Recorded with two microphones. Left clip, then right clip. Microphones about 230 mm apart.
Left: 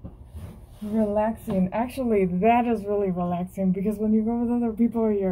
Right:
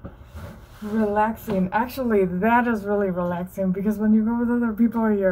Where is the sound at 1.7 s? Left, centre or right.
Right.